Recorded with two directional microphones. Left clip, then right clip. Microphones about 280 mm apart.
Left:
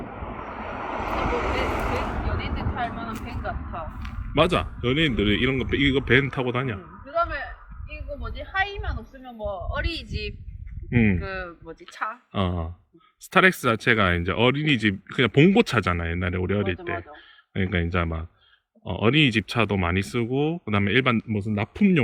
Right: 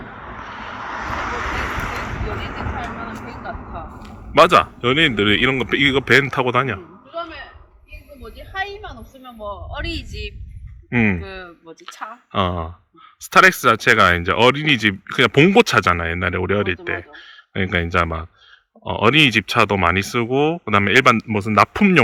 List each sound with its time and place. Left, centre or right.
0.0 s vehicle: left
4.0 s a man's voice: centre
8.2 s a man's voice: centre